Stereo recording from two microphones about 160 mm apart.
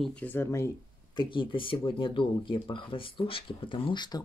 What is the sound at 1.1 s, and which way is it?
Speech, 30° left (ahead or behind).